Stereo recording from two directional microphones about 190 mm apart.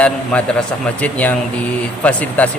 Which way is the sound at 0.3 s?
5° left (ahead or behind).